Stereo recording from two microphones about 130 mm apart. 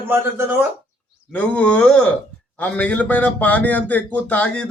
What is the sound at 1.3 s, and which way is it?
Speech, 10° left (ahead or behind).